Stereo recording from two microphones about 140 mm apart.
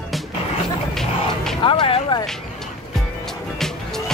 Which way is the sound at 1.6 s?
35° left (ahead or behind).